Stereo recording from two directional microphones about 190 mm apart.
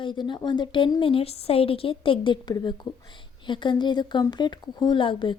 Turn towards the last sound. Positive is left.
turn(degrees=25)  # may be behind; listen again after turning